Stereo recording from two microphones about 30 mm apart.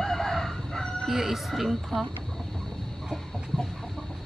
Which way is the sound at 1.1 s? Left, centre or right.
Centre.